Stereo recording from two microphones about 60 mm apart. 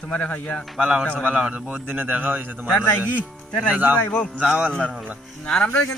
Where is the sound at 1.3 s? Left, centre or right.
Centre.